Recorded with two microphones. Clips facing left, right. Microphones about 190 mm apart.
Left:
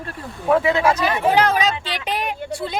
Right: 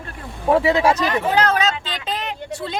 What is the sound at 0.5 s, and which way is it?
Speech, 30° right (ahead or behind).